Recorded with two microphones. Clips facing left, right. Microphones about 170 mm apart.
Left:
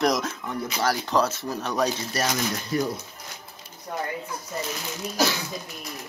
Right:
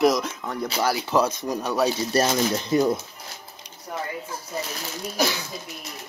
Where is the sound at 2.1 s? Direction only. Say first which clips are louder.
Right 5 dB; 25° right (ahead or behind).